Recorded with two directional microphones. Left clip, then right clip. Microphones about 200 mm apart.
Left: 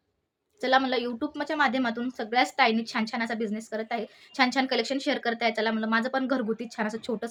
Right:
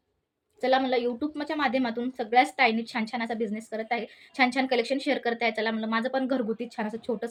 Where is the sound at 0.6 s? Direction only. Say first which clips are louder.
Even; 20° left (ahead or behind).